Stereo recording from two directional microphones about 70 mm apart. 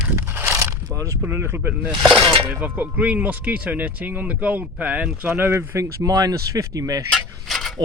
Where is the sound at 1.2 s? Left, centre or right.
Right.